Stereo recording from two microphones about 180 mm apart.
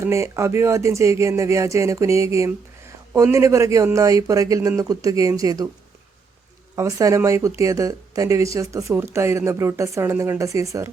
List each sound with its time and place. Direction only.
0.0 s speech: 15° right (ahead or behind)
6.7 s speech: 15° right (ahead or behind)